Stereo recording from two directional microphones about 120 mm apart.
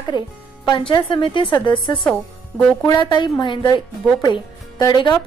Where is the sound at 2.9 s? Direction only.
40° left (ahead or behind).